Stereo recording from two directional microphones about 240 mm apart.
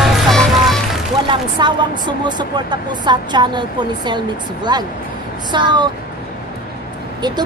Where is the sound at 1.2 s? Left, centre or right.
Centre.